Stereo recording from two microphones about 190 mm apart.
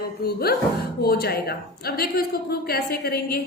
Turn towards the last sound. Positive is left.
turn(degrees=55)  # may be behind; listen again after turning